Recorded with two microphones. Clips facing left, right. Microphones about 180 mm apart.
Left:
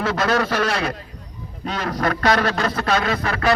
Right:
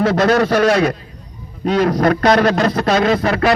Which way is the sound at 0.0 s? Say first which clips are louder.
Right 7 dB; 40° right (ahead or behind).